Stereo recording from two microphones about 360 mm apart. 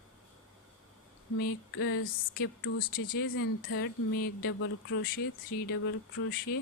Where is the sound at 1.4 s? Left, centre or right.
Left.